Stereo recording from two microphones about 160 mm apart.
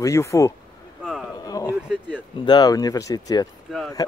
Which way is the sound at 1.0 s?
Centre (ahead or behind).